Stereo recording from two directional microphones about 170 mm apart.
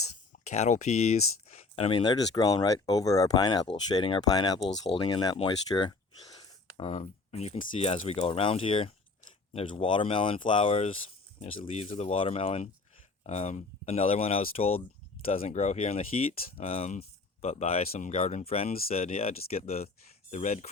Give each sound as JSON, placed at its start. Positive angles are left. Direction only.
{"t": 0.4, "sound": "speech", "side_deg": 40}